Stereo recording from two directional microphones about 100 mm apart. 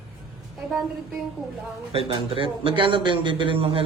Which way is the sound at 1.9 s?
70° right (ahead or behind).